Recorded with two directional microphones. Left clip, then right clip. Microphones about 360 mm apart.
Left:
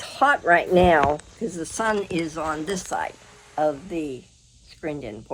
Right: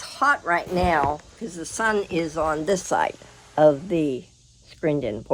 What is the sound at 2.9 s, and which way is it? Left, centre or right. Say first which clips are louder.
Speech: right 5 dB; right.